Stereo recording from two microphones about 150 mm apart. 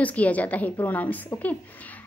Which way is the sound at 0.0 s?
10° left (ahead or behind).